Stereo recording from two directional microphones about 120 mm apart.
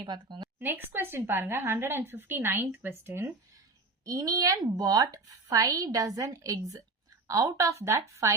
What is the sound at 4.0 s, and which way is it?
Speech, 30° right (ahead or behind).